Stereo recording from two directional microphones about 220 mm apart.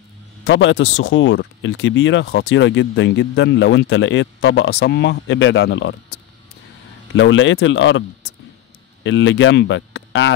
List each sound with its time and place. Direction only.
0.5 s speech: 60° left (ahead or behind)
7.2 s speech: 60° left (ahead or behind)
9.0 s speech: 55° left (ahead or behind)